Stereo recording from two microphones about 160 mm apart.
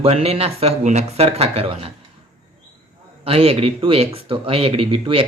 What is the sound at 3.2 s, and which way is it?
Speech, 35° right (ahead or behind).